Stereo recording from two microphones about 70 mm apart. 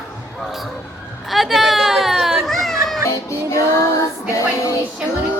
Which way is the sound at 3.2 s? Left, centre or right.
Left.